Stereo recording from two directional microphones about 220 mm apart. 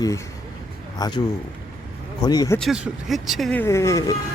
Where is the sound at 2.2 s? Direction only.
15° left (ahead or behind).